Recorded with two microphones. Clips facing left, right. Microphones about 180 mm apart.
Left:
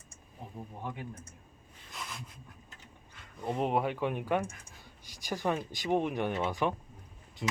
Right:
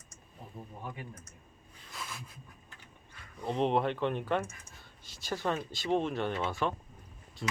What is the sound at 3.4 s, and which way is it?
Speech, 10° left (ahead or behind).